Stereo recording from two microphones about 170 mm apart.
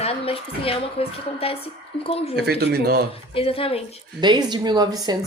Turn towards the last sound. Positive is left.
turn(degrees=-25)  # may be behind; listen again after turning